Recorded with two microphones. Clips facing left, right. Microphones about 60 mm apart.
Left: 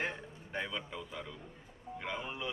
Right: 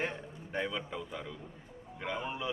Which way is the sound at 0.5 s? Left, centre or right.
Centre.